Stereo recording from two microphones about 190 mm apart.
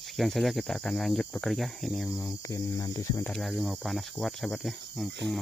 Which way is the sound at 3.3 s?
Centre (ahead or behind).